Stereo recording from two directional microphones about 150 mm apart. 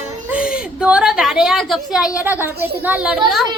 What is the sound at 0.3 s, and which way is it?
A woman's voice, 5° right (ahead or behind).